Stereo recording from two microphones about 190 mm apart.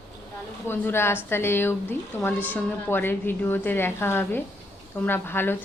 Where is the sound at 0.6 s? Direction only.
10° left (ahead or behind).